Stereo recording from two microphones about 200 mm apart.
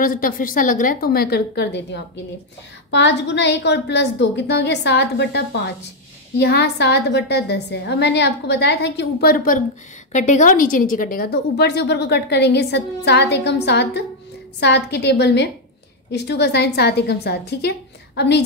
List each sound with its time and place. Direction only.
0.0 s a woman's voice: 45° left (ahead or behind)